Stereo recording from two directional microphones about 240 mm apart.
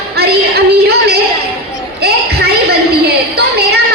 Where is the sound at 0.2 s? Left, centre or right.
Right.